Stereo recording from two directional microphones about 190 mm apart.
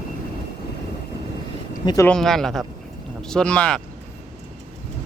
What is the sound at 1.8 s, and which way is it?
Speech, 20° left (ahead or behind).